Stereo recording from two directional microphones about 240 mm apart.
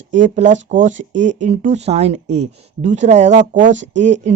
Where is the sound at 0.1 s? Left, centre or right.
Right.